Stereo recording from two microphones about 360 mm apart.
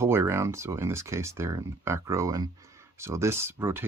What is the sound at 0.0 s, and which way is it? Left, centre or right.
Speech, centre.